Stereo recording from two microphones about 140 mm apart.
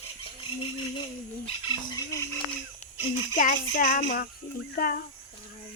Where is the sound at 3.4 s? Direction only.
80° left.